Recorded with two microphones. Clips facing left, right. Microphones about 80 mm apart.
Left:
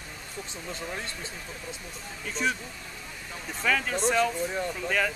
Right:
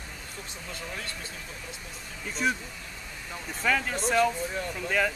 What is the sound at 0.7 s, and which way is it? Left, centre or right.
Speech, left.